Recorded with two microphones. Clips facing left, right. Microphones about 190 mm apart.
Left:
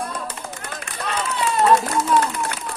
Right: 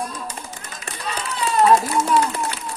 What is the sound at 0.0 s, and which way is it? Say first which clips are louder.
Run: left 1 dB; 60° left (ahead or behind).